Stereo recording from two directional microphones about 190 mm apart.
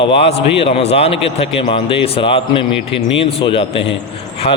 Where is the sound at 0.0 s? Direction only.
30° left (ahead or behind).